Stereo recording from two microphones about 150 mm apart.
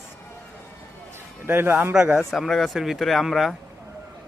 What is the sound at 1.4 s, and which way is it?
A man's voice, 15° right (ahead or behind).